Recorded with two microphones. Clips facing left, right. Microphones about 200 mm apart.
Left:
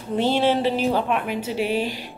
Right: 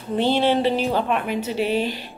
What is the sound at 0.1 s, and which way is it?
A woman's voice, 5° left (ahead or behind).